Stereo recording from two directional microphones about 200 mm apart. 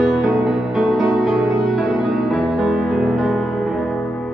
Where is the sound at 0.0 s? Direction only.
Centre (ahead or behind).